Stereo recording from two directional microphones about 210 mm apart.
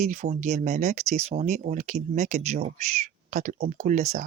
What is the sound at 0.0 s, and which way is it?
Speech, 30° right (ahead or behind).